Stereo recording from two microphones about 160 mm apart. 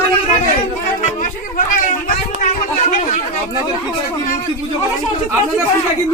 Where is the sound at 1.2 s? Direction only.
60° left (ahead or behind).